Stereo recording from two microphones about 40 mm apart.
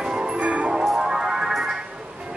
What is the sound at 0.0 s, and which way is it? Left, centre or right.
Music, right.